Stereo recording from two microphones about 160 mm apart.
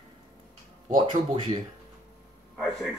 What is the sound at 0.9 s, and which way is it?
Speech, 30° right (ahead or behind).